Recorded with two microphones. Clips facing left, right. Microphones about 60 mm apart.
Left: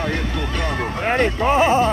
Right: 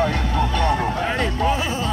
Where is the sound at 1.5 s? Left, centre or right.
Left.